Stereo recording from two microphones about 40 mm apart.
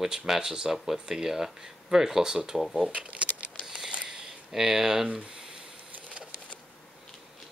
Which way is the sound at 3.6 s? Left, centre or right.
Centre.